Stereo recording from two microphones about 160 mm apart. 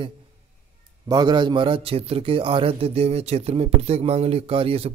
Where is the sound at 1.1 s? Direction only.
25° right (ahead or behind).